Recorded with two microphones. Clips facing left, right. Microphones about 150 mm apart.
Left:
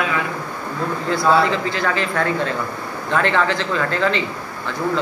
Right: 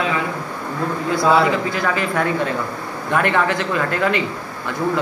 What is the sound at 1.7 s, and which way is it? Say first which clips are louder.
A man's voice: right 1 dB; 10° right (ahead or behind).